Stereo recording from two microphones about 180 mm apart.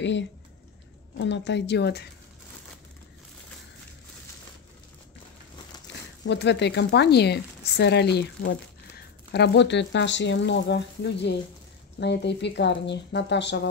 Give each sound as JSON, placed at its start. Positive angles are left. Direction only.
{"t": 0.0, "sound": "speech", "side_deg": 85}
{"t": 6.2, "sound": "speech", "side_deg": 75}